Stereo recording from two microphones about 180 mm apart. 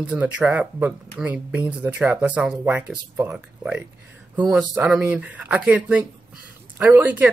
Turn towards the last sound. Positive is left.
turn(degrees=-10)  # may be behind; listen again after turning